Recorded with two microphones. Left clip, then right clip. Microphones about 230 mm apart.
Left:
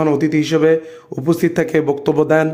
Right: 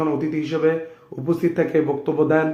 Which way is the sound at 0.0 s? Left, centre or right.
Left.